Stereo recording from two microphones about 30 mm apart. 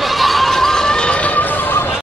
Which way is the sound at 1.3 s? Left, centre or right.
Left.